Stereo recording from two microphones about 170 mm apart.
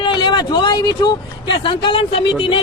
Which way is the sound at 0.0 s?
30° left (ahead or behind).